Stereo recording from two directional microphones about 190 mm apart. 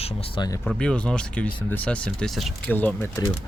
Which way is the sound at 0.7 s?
5° left (ahead or behind).